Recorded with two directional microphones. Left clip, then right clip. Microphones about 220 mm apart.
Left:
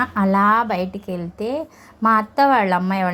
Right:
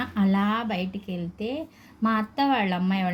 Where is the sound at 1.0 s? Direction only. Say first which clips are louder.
Left 7 dB; 45° left (ahead or behind).